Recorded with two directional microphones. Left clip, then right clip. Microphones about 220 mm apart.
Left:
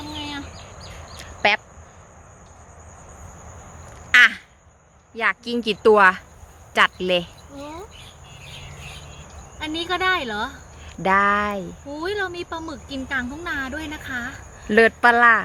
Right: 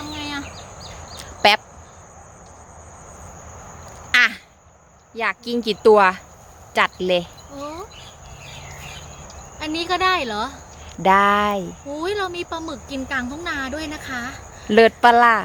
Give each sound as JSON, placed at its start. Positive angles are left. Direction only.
{"t": 0.2, "sound": "bird", "side_deg": 0}
{"t": 1.2, "sound": "a sound", "side_deg": -15}
{"t": 4.1, "sound": "a sound", "side_deg": -5}
{"t": 5.1, "sound": "speech", "side_deg": -5}
{"t": 9.6, "sound": "speech", "side_deg": 0}
{"t": 12.0, "sound": "speech", "side_deg": 0}